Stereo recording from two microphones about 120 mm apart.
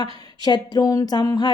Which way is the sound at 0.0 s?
35° left (ahead or behind).